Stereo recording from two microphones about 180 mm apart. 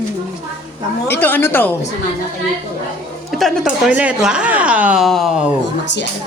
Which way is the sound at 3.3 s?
Centre (ahead or behind).